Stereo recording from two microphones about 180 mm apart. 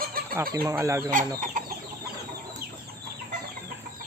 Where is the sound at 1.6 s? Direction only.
45° right (ahead or behind).